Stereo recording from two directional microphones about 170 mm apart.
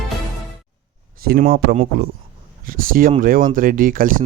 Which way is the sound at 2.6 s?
55° right (ahead or behind).